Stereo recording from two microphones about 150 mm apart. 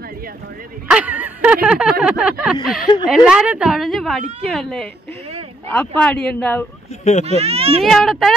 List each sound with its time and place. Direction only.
0.8 s a sound: 10° right (ahead or behind)
3.1 s a woman's voice: 5° right (ahead or behind)
7.2 s speech: 45° right (ahead or behind)
7.8 s a woman's voice: centre (ahead or behind)